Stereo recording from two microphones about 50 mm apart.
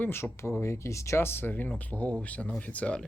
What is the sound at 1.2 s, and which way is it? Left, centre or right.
Speech, left.